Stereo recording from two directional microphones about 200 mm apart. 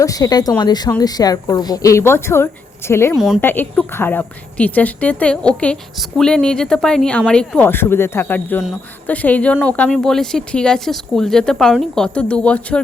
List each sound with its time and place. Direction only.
0.0 s a woman's voice: 15° left (ahead or behind)
3.2 s speech: 5° right (ahead or behind)
3.4 s a woman's voice: 10° left (ahead or behind)